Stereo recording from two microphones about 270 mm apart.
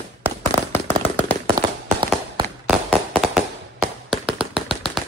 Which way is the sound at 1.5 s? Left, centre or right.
Centre.